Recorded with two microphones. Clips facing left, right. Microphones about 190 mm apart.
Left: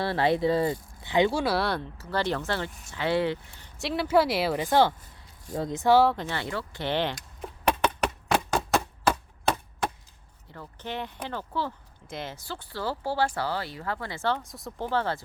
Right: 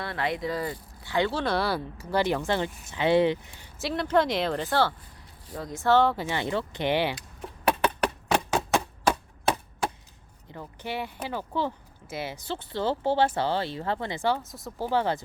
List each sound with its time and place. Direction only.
0.0 s speech: 30° left (ahead or behind); by 1.8 s centre (ahead or behind)
2.0 s speech: 15° right (ahead or behind)
3.8 s speech: centre (ahead or behind)
6.1 s speech: 15° right (ahead or behind)
7.7 s a sound: 10° right (ahead or behind)
10.5 s speech: 15° right (ahead or behind)
12.4 s speech: 20° right (ahead or behind); by 14.8 s centre (ahead or behind)
14.8 s speech: 15° right (ahead or behind)